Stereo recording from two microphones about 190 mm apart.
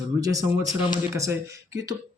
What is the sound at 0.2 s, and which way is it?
Speech, 20° right (ahead or behind).